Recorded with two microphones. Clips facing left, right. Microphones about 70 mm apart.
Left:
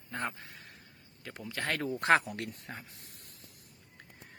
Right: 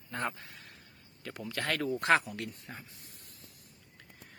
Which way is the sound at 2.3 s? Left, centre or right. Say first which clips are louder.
Left 1 dB; left.